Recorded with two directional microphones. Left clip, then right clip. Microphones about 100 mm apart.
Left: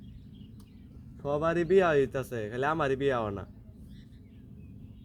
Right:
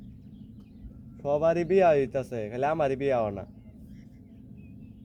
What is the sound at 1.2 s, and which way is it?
A man's voice, 30° left (ahead or behind).